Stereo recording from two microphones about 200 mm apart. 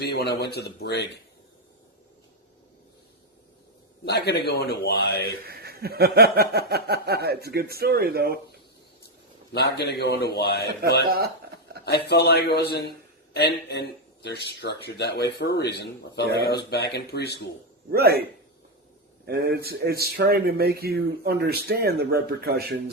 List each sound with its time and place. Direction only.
0.1 s speech: 55° left (ahead or behind)
4.0 s a man's voice: 55° left (ahead or behind)
5.5 s speech: 50° right (ahead or behind)
9.5 s a man's voice: 55° left (ahead or behind)
11.9 s a man's voice: 55° left (ahead or behind)
17.9 s speech: 50° right (ahead or behind)